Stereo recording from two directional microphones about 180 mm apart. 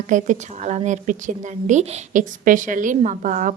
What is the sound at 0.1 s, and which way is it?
A woman's voice, 45° right (ahead or behind).